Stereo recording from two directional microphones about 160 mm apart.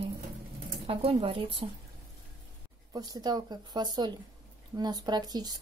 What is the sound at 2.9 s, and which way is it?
Speech, 25° right (ahead or behind).